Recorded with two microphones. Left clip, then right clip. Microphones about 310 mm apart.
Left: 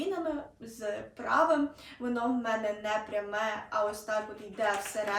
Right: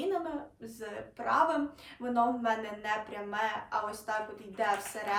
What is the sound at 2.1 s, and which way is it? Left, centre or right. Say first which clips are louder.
Speech: right 3 dB; centre.